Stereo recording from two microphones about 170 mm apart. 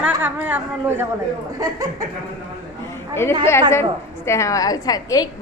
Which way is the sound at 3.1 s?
15° left (ahead or behind).